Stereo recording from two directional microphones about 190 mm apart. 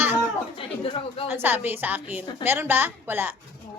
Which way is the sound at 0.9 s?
30° left (ahead or behind).